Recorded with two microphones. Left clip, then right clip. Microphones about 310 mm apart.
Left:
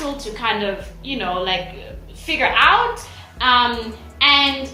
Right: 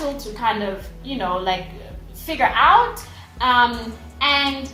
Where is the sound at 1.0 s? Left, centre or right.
Right.